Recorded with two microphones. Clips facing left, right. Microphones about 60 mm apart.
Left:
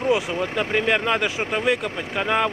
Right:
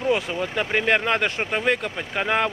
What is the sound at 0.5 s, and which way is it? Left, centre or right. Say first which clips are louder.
Speech: right 1 dB; centre.